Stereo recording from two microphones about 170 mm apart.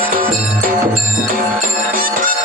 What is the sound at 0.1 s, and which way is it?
Music, 55° right (ahead or behind).